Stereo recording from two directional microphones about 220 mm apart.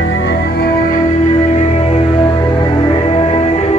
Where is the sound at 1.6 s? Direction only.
30° left (ahead or behind).